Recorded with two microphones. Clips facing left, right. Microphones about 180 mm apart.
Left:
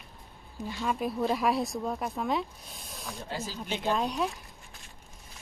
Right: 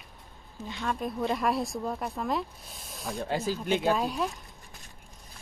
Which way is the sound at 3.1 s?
55° right (ahead or behind).